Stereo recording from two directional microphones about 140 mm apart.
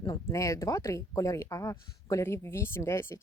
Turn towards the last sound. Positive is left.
turn(degrees=20)  # may be behind; listen again after turning